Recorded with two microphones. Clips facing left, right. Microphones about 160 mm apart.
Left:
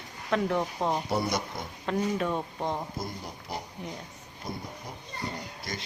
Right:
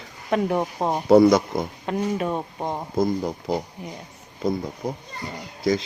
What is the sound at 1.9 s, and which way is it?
Speech, 15° right (ahead or behind).